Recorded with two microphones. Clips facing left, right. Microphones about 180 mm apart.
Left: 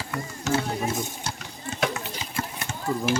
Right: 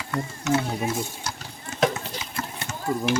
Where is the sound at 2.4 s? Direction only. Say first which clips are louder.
Left 2 dB; 30° left (ahead or behind).